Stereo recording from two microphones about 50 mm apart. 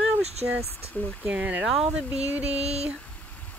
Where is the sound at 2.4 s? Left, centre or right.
Right.